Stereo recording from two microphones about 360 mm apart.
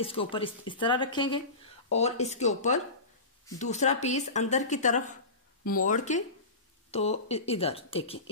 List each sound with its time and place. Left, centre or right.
0.0 s speech: centre